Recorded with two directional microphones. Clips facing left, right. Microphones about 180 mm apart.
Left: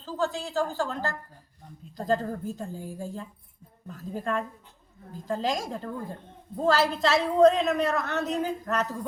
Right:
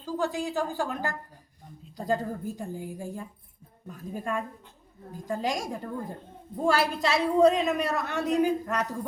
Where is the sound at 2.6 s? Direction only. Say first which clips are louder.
Even; 15° right (ahead or behind).